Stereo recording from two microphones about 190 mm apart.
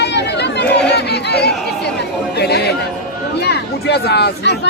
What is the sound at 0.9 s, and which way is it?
Crowd, 60° left (ahead or behind).